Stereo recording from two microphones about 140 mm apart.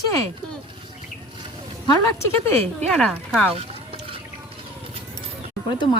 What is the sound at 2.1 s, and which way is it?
Speech, 15° left (ahead or behind).